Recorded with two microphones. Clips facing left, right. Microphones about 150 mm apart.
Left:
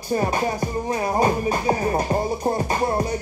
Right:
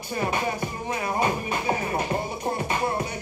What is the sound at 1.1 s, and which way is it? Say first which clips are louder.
Music: left 6 dB; 35° left (ahead or behind).